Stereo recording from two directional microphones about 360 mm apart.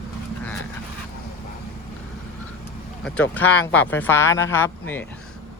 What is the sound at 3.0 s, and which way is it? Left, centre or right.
Speech, centre.